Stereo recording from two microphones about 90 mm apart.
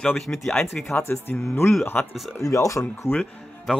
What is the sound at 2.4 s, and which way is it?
Speech, 35° left (ahead or behind).